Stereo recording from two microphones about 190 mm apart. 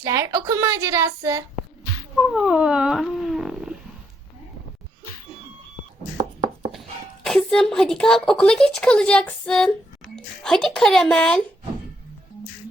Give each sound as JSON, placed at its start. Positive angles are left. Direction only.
{"t": 0.0, "sound": "a woman's voice", "side_deg": -15}
{"t": 2.1, "sound": "a sound", "side_deg": 0}
{"t": 7.3, "sound": "a woman's voice", "side_deg": 5}